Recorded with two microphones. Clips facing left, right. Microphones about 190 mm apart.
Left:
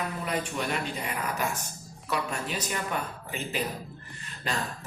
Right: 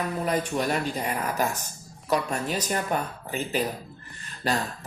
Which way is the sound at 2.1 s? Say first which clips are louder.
Right 5 dB; 40° right (ahead or behind).